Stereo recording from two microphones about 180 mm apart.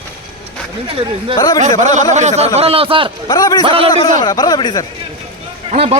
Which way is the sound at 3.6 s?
30° right (ahead or behind).